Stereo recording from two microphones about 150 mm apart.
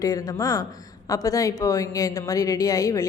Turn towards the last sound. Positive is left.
turn(degrees=25)  # may be behind; listen again after turning